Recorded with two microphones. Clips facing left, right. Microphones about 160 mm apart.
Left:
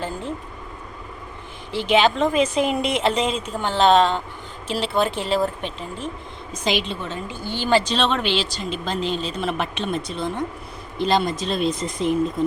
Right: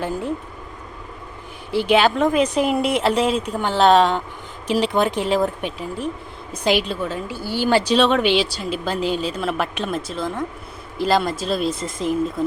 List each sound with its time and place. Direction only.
1.7 s a woman's voice: 10° right (ahead or behind)